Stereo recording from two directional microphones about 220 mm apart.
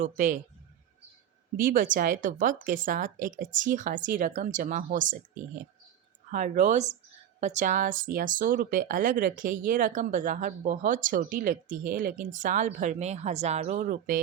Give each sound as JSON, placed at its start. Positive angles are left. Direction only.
{"t": 0.0, "sound": "speech", "side_deg": -40}
{"t": 1.5, "sound": "speech", "side_deg": -40}